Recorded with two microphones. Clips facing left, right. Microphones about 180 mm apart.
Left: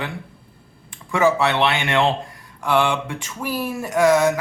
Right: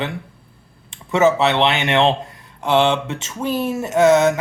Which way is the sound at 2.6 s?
25° right (ahead or behind).